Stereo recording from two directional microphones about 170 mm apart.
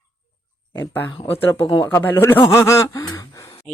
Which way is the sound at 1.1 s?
30° left (ahead or behind).